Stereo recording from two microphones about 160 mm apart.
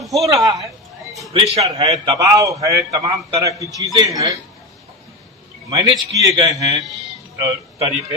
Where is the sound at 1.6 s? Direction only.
20° right (ahead or behind).